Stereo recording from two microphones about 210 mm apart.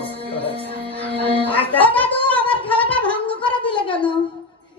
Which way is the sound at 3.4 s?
25° left (ahead or behind).